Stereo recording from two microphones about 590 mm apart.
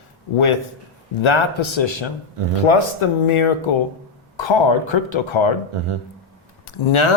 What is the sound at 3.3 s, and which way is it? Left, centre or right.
Speech, left.